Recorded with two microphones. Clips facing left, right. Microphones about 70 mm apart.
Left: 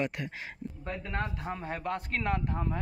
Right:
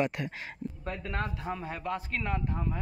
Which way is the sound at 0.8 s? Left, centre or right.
Left.